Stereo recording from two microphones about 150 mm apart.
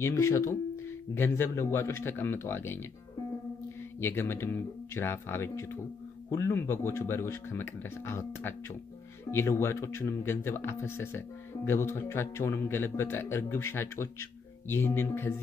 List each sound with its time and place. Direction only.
0.0 s speech: 20° left (ahead or behind)
4.0 s speech: 15° left (ahead or behind)